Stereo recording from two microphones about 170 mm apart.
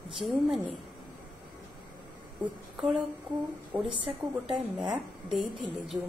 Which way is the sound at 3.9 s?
30° right (ahead or behind).